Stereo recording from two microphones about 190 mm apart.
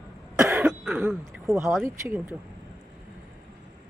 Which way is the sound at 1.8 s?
15° right (ahead or behind).